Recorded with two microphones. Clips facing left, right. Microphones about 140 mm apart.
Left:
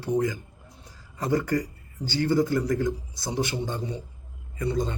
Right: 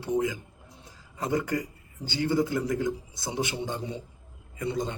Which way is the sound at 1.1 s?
20° right (ahead or behind).